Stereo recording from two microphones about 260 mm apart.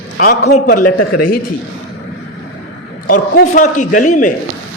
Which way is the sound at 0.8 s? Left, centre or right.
Left.